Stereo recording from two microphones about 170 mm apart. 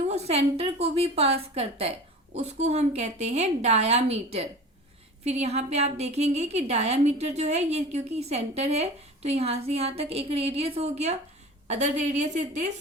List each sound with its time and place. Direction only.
0.1 s a woman's voice: 40° right (ahead or behind)